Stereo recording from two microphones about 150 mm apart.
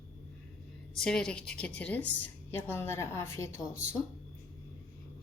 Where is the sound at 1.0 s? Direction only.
5° left (ahead or behind).